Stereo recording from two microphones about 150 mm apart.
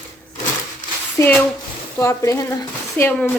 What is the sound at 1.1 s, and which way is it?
A woman's voice, 15° left (ahead or behind).